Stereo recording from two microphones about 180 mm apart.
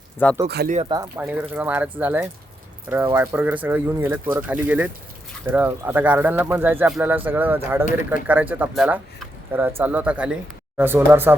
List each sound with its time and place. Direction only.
0.4 s speech: 65° right (ahead or behind)
1.1 s speech: 10° right (ahead or behind)